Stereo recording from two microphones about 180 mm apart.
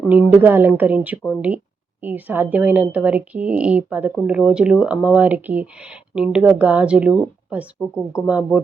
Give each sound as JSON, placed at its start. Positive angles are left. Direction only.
{"t": 0.1, "sound": "a woman's voice", "side_deg": -10}